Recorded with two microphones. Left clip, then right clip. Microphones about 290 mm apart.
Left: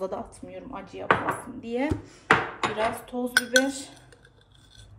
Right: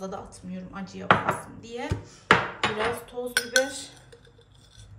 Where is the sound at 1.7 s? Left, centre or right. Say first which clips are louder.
Left 6 dB; left.